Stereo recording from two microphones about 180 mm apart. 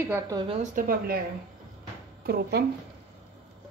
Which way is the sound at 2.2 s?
60° right (ahead or behind).